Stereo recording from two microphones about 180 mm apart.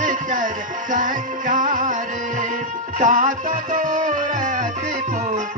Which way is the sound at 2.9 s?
45° right (ahead or behind).